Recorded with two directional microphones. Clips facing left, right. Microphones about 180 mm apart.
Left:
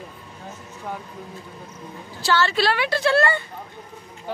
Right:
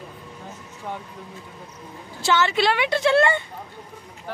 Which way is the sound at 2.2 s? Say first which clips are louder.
Even; 20° right (ahead or behind).